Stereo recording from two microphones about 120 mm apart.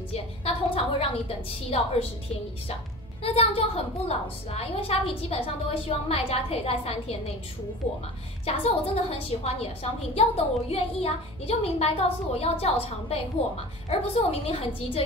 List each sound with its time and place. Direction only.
0.1 s a woman's voice: 50° left (ahead or behind)
8.5 s a woman's voice: 55° left (ahead or behind)